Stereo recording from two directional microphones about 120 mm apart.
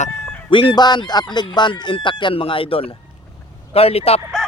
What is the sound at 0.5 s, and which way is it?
Speech, 45° left (ahead or behind).